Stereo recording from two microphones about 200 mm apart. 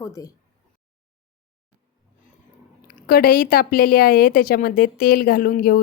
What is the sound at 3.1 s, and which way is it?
A woman's voice, 45° left (ahead or behind).